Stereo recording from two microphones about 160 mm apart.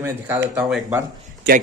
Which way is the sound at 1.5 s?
90° right.